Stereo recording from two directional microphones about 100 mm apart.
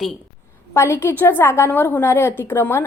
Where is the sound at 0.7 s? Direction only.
25° left (ahead or behind).